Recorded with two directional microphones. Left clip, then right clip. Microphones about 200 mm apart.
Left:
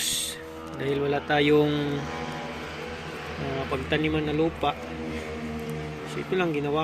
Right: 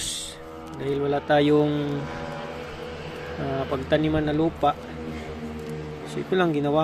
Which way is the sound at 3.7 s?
25° right (ahead or behind).